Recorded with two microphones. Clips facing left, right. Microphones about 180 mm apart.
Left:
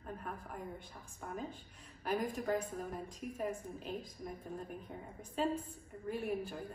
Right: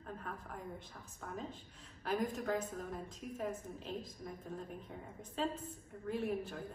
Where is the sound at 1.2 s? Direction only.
10° left (ahead or behind).